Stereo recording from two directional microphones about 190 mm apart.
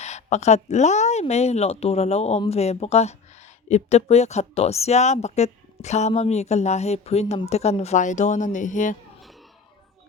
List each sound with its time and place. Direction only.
0.0 s speech: 35° left (ahead or behind)